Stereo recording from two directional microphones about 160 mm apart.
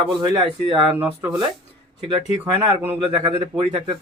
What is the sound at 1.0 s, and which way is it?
Speech, 15° right (ahead or behind).